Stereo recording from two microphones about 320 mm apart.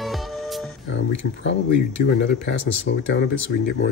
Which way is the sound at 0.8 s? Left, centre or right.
Left.